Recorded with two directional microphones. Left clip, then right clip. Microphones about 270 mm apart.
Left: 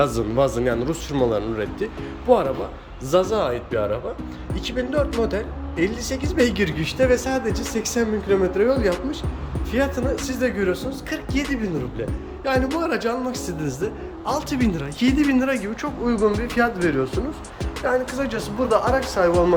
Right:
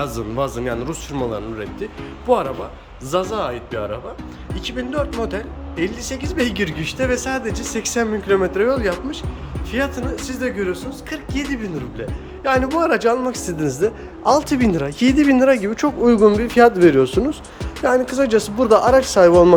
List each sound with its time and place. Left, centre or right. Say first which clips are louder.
0.0 s speech: left 3 dB; centre
3.1 s speech: left 1 dB; centre; by 17.1 s right
18.1 s speech: right 9 dB; right